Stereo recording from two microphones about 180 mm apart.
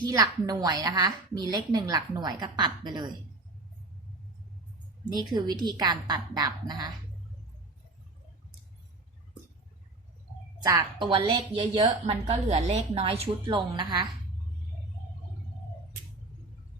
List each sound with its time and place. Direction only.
0.0 s a woman's voice: 20° right (ahead or behind)
5.1 s a woman's voice: 20° right (ahead or behind)
10.6 s a woman's voice: 20° right (ahead or behind)
12.5 s a woman's voice: 35° right (ahead or behind)